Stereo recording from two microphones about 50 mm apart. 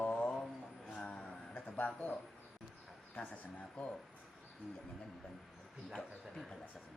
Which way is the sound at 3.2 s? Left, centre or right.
Left.